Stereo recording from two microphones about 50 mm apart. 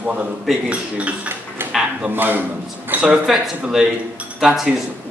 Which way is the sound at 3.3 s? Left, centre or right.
Centre.